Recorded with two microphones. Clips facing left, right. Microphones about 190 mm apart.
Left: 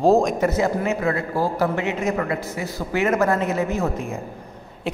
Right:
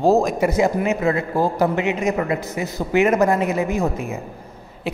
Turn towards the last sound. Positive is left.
turn(degrees=-10)  # may be behind; listen again after turning